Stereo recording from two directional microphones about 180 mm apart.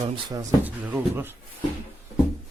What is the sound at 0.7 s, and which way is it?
Speech, 10° right (ahead or behind).